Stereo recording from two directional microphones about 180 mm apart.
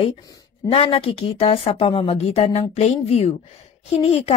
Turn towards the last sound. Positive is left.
turn(degrees=35)  # may be behind; listen again after turning